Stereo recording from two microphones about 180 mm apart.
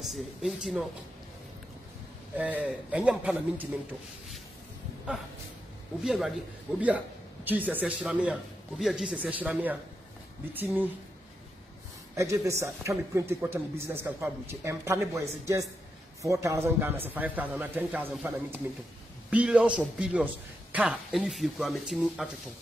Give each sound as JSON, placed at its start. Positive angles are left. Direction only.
{"t": 0.0, "sound": "speech", "side_deg": 0}
{"t": 2.3, "sound": "a man's voice", "side_deg": -10}
{"t": 6.0, "sound": "a man's voice", "side_deg": 0}
{"t": 12.2, "sound": "a man's voice", "side_deg": -15}
{"t": 19.3, "sound": "a man's voice", "side_deg": -5}